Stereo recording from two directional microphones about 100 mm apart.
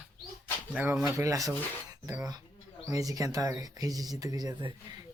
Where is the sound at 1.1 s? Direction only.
35° right (ahead or behind).